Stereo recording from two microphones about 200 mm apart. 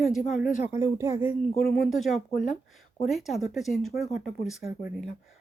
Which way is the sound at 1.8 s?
Centre (ahead or behind).